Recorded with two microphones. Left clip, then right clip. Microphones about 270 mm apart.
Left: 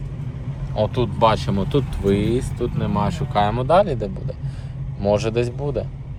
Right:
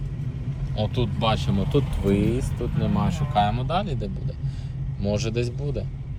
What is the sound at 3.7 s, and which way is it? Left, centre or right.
Speech, centre.